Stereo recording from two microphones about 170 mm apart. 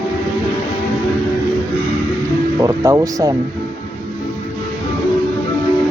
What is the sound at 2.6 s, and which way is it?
Speech, 20° right (ahead or behind).